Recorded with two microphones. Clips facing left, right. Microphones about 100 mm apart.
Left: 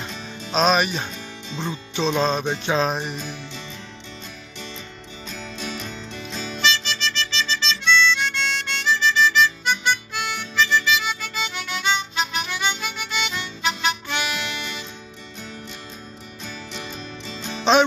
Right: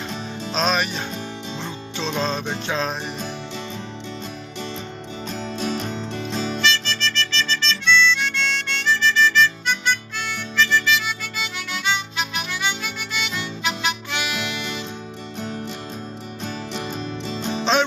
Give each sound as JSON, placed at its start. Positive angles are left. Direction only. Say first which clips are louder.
{"t": 0.5, "sound": "music", "louder": "left 4 dB", "side_deg": 5}
{"t": 5.3, "sound": "music", "louder": "right 6 dB", "side_deg": -40}
{"t": 6.6, "sound": "harmonica", "louder": "left 3 dB", "side_deg": 15}
{"t": 16.8, "sound": "music", "louder": "right 6 dB", "side_deg": -45}